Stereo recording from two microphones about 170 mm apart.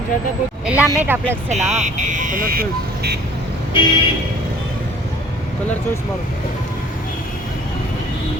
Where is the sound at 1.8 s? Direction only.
50° right (ahead or behind); by 3.2 s 65° right (ahead or behind).